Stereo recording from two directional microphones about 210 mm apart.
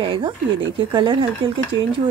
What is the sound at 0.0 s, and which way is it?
A woman's voice, 25° right (ahead or behind).